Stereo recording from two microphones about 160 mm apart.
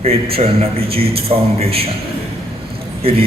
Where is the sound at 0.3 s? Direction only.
40° right (ahead or behind).